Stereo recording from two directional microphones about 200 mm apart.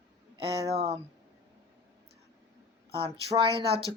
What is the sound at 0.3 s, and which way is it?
Speech, 30° right (ahead or behind).